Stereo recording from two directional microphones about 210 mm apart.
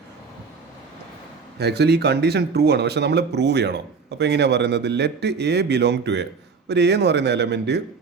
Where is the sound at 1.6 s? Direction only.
50° right (ahead or behind).